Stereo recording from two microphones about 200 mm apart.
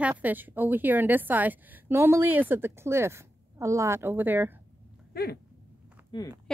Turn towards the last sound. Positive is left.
turn(degrees=25)  # may be behind; listen again after turning